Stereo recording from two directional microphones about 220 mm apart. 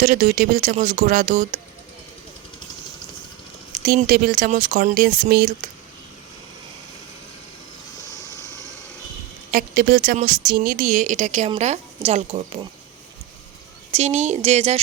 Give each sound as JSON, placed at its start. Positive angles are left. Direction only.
{"t": 0.0, "sound": "speech", "side_deg": -35}
{"t": 3.7, "sound": "speech", "side_deg": -35}
{"t": 9.5, "sound": "speech", "side_deg": -40}
{"t": 13.9, "sound": "speech", "side_deg": -30}